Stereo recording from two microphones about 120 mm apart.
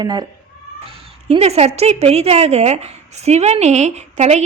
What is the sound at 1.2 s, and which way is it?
A woman's voice, 60° right (ahead or behind).